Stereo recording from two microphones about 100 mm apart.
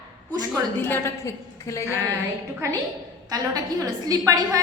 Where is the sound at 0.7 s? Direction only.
20° left (ahead or behind).